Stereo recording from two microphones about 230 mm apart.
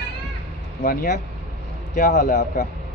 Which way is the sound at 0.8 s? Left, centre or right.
Left.